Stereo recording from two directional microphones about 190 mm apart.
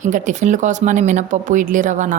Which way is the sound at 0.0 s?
40° right (ahead or behind).